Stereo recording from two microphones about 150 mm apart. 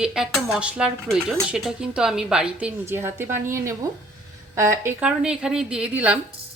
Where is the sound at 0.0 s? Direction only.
5° right (ahead or behind).